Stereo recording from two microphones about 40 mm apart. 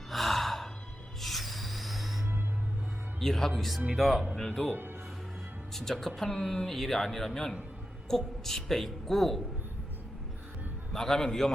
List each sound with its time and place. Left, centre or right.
0.1 s gasp: centre
1.2 s music: centre
3.2 s a woman's voice: centre
4.6 s a woman's voice: centre
10.9 s a woman's voice: centre